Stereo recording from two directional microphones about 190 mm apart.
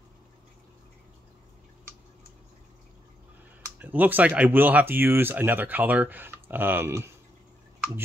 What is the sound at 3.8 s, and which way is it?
Speech, 10° right (ahead or behind).